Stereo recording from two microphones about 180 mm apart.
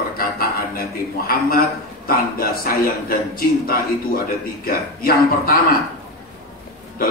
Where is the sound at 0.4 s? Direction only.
55° left (ahead or behind).